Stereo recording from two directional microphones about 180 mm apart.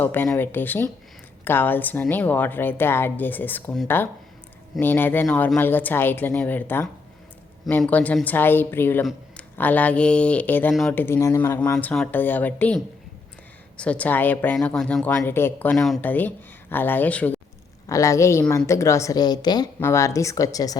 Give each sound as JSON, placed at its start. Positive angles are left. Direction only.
{"t": 0.0, "sound": "speech", "side_deg": 10}
{"t": 11.0, "sound": "speech", "side_deg": 15}